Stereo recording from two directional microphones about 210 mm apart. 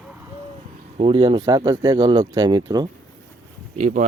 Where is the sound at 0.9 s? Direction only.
25° right (ahead or behind).